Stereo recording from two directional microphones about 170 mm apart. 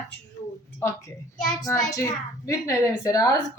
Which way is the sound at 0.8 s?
15° left (ahead or behind).